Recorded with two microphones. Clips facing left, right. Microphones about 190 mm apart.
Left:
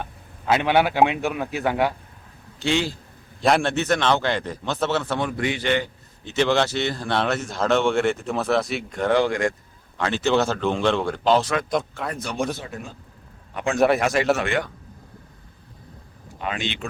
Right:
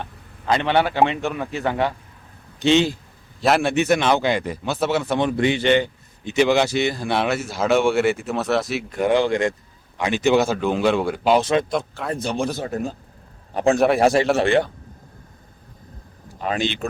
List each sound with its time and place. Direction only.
0.0 s a man's voice: 5° left (ahead or behind)
2.6 s speech: 20° right (ahead or behind)
3.4 s a man's voice: 5° right (ahead or behind)
9.0 s a man's voice: 20° right (ahead or behind); by 12.1 s centre (ahead or behind)
12.1 s speech: 25° right (ahead or behind)
12.5 s a man's voice: 40° right (ahead or behind)
13.7 s speech: centre (ahead or behind)
14.3 s speech: 30° right (ahead or behind)
16.4 s speech: 35° right (ahead or behind)